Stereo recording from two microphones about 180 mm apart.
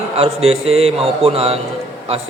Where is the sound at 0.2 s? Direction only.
35° right (ahead or behind).